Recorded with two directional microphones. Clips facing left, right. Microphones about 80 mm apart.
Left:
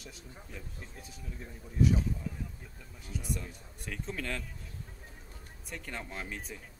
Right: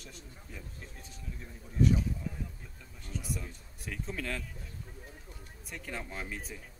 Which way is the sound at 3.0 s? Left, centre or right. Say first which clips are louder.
Left 1 dB; centre.